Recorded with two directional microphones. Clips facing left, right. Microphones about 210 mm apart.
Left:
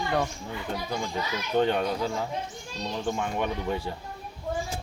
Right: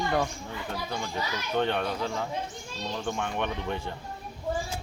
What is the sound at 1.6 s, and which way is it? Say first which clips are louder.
Speech: left 3 dB; 10° left (ahead or behind).